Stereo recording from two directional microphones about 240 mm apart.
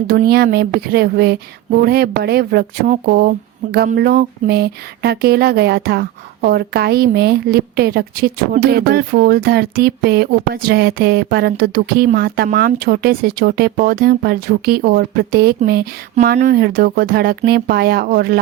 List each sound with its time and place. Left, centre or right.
0.1 s speech: right